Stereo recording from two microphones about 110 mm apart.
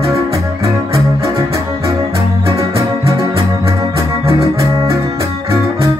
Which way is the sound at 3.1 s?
25° right (ahead or behind).